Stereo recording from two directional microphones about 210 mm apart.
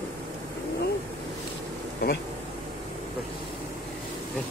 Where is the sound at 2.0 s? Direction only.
50° left (ahead or behind).